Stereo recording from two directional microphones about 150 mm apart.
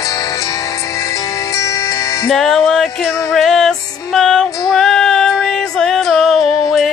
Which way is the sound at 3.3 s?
Centre (ahead or behind).